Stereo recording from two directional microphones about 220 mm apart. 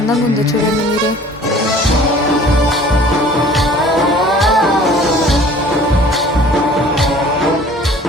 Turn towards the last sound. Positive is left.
turn(degrees=0)  # may be behind; listen again after turning